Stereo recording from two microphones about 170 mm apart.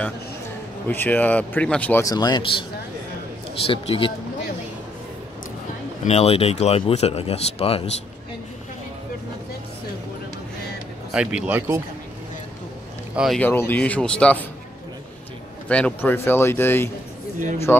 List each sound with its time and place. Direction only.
0.8 s speech: 10° left (ahead or behind)
3.6 s speech: 35° left (ahead or behind)
6.0 s speech: 40° left (ahead or behind)
11.1 s speech: 10° right (ahead or behind)
13.1 s speech: 5° right (ahead or behind)
13.4 s speech: 10° left (ahead or behind)
15.7 s speech: 10° left (ahead or behind)